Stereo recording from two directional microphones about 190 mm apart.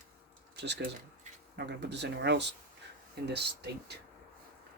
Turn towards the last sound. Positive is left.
turn(degrees=-60)  # may be behind; listen again after turning